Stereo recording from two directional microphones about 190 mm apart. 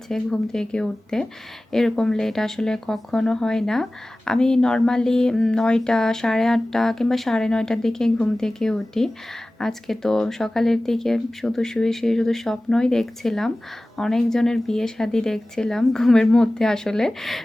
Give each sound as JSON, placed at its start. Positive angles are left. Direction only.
{"t": 0.1, "sound": "speech", "side_deg": 5}